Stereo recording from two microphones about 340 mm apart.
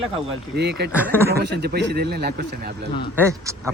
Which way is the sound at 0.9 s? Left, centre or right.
Centre.